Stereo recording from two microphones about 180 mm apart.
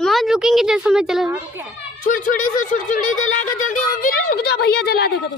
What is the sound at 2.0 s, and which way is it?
Speech, 45° left (ahead or behind).